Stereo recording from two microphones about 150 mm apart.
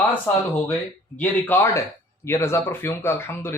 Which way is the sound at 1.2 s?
15° left (ahead or behind).